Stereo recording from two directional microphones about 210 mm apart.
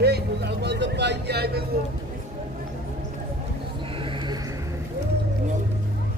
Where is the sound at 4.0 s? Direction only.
25° right (ahead or behind).